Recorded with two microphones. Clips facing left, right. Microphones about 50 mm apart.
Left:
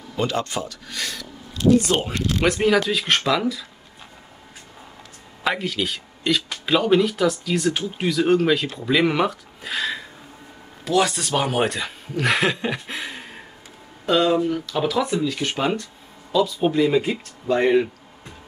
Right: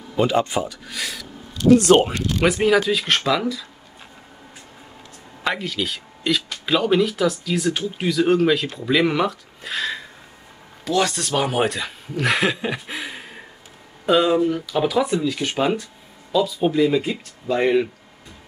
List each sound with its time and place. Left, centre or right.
0.1 s speech: centre
1.9 s speech: right
2.4 s speech: centre
5.4 s speech: centre
16.3 s a sound: centre
16.6 s speech: centre